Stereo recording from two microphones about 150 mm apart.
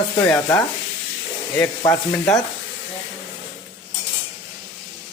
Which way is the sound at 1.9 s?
20° left (ahead or behind).